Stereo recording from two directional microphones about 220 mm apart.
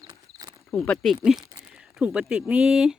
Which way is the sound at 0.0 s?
20° right (ahead or behind).